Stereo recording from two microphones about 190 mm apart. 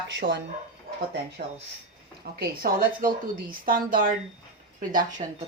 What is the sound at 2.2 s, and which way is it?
A woman's voice, 55° right (ahead or behind).